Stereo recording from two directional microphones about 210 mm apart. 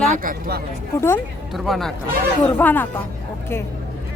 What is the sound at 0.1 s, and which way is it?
Speech, 45° right (ahead or behind).